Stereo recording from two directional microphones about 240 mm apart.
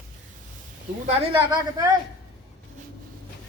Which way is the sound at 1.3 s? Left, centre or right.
Centre.